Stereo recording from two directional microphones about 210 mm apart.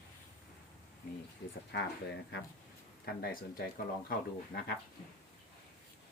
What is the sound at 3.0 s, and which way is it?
Speech, 45° left (ahead or behind).